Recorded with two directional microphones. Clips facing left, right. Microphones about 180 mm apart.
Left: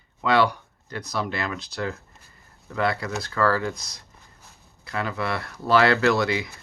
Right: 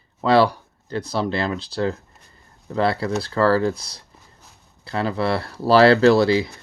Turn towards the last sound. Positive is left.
turn(degrees=-30)  # may be behind; listen again after turning